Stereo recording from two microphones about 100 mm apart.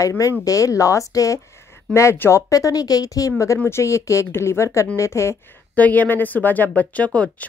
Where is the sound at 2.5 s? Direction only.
35° left (ahead or behind).